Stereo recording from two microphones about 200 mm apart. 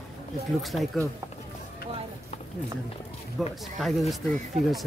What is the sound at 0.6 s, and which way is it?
Speech, centre (ahead or behind).